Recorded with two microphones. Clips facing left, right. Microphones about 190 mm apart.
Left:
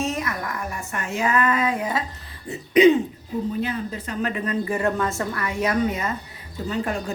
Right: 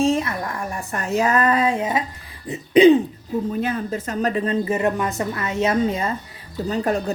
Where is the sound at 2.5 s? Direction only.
30° right (ahead or behind).